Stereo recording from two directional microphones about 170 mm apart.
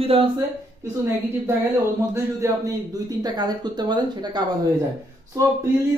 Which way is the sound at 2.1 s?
20° right (ahead or behind).